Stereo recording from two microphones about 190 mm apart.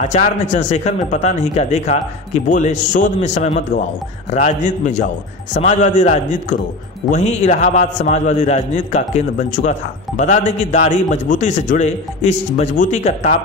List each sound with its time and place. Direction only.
0.0 s a man's voice: 40° left (ahead or behind)